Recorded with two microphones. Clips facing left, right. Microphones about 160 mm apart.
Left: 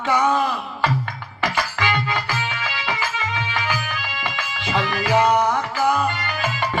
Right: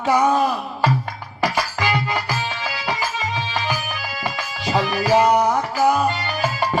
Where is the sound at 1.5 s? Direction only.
10° right (ahead or behind).